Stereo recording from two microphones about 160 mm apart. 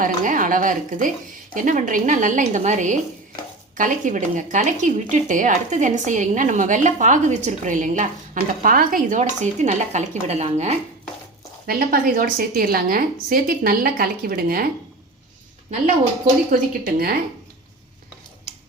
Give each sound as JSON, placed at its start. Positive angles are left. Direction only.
{"t": 0.0, "sound": "a woman's voice", "side_deg": -55}
{"t": 8.6, "sound": "speech", "side_deg": -65}
{"t": 11.6, "sound": "a woman's voice", "side_deg": -70}
{"t": 16.5, "sound": "a woman's voice", "side_deg": -65}